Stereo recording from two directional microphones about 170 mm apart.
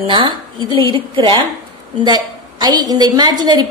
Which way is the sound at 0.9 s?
30° right (ahead or behind).